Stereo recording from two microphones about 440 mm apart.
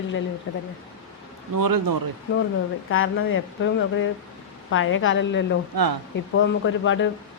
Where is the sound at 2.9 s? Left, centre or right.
Left.